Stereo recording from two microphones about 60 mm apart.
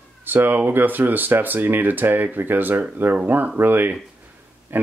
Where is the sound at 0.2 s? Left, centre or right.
Right.